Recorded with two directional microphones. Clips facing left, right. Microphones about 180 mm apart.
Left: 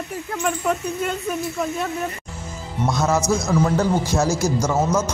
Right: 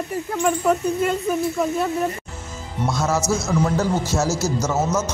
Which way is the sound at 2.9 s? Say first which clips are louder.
Left 2 dB; 15° left (ahead or behind).